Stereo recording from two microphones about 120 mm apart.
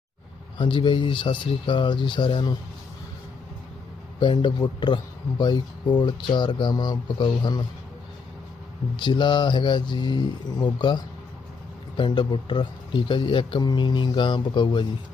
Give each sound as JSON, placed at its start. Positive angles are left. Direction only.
{"t": 0.6, "sound": "speech", "side_deg": 45}
{"t": 4.2, "sound": "speech", "side_deg": 40}
{"t": 9.0, "sound": "speech", "side_deg": 40}